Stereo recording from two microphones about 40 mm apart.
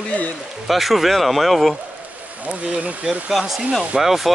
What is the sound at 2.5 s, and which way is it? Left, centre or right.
Speech, right.